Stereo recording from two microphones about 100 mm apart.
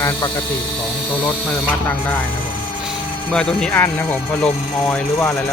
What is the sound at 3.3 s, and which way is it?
Speech, 5° left (ahead or behind).